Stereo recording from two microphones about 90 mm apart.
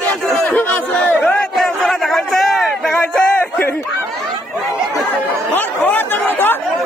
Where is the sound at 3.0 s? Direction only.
20° left (ahead or behind).